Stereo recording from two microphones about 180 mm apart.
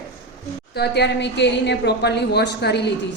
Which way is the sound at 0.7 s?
65° left (ahead or behind).